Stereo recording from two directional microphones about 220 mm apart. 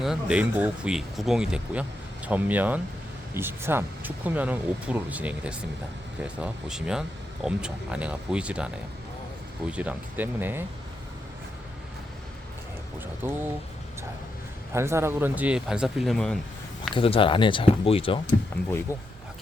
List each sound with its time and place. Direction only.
0.0 s speech: 5° right (ahead or behind)
13.2 s speech: 10° right (ahead or behind)
14.7 s speech: 10° right (ahead or behind)
16.9 s speech: 25° left (ahead or behind)
18.9 s speech: 15° left (ahead or behind)